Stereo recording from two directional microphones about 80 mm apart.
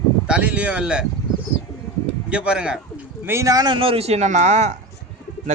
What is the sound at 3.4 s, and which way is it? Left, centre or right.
Speech, right.